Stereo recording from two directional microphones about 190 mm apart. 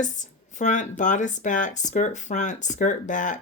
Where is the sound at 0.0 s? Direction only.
40° left (ahead or behind).